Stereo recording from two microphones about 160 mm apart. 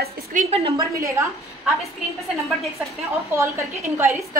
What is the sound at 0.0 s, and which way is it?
Speech, 50° right (ahead or behind).